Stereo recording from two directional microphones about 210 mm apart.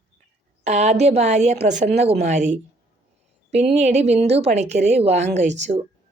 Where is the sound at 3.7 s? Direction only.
30° right (ahead or behind).